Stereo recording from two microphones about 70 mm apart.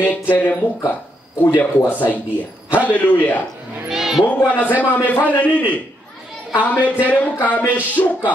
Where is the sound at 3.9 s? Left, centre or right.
Centre.